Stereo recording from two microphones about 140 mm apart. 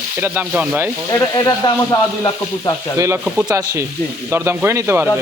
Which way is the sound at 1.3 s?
30° left (ahead or behind).